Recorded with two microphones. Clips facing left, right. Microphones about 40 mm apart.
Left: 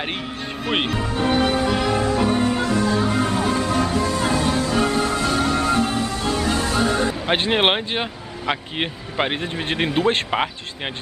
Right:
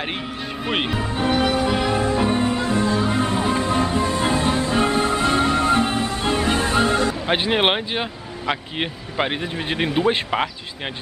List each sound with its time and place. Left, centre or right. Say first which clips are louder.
0.7 s speech: left 1 dB; centre
1.0 s speech: left 1 dB; centre
1.3 s music: even; centre
2.6 s music: even; right
7.2 s speech: left 2 dB; centre